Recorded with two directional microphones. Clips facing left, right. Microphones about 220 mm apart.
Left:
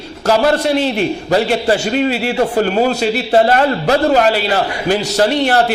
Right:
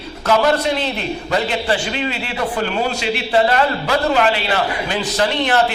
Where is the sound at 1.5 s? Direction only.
45° left (ahead or behind).